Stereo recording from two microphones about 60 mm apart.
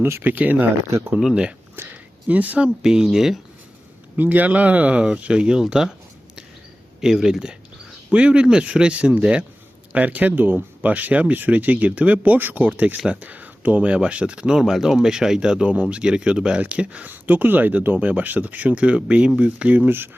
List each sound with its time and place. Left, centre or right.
0.0 s speech: right
0.3 s speech: right
0.9 s speech: right
1.9 s a sound: right
2.6 s speech: centre
4.2 s speech: right; by 5.9 s centre
7.0 s speech: centre; by 20.1 s right